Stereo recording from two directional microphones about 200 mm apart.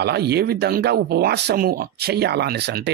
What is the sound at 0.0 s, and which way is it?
Speech, 55° right (ahead or behind).